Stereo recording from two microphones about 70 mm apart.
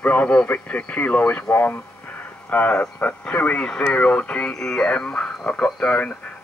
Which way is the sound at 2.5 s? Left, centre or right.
Left.